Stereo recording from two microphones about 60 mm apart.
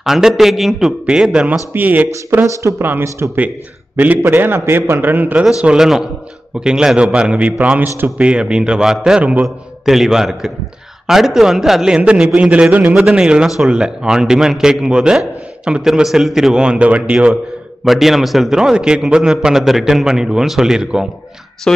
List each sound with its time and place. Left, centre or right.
0.0 s a man's voice: centre
1.7 s speech: right
2.8 s a man's voice: right
3.3 s a man's voice: right
4.3 s a man's voice: right
5.8 s a man's voice: centre
9.2 s speech: right
9.8 s a man's voice: centre
11.9 s a man's voice: centre
12.9 s a man's voice: centre
16.5 s speech: centre
17.8 s a man's voice: centre
21.7 s speech: centre